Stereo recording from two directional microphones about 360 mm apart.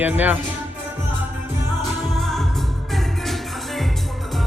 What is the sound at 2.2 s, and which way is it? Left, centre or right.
Music, centre.